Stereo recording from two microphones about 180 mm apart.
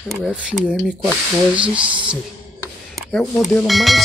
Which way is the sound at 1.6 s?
30° right (ahead or behind).